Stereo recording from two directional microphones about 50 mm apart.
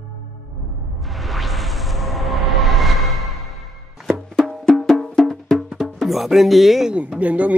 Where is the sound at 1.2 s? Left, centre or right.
Centre.